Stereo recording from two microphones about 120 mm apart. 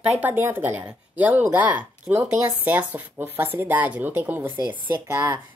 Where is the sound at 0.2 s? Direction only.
15° right (ahead or behind).